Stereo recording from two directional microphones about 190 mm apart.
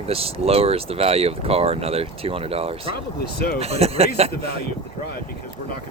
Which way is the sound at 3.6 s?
30° right (ahead or behind).